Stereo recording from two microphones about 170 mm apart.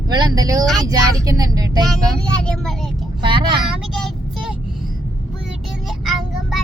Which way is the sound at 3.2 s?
30° right (ahead or behind).